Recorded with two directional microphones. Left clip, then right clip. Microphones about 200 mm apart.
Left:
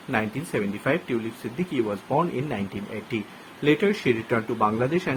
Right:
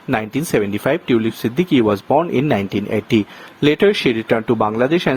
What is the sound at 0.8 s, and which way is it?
Speech, 50° right (ahead or behind).